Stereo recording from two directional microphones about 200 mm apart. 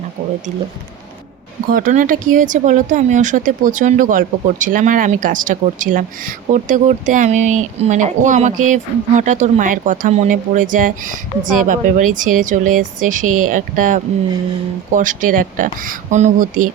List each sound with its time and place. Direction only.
0.2 s speech: 30° right (ahead or behind)
1.7 s speech: 40° right (ahead or behind)